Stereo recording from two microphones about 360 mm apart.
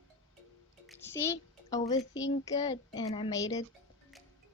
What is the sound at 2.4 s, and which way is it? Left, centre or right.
Speech, centre.